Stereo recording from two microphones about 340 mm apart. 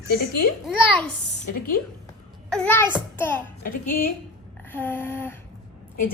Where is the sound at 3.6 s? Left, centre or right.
Left.